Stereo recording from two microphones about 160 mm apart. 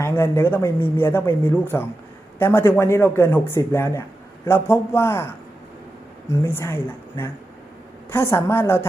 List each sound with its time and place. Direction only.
0.0 s speech: 15° left (ahead or behind)